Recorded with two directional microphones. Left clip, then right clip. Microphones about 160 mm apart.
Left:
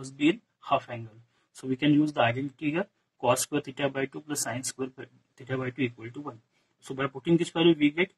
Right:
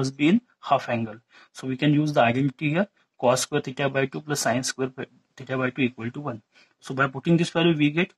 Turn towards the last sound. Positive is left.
turn(degrees=-40)  # may be behind; listen again after turning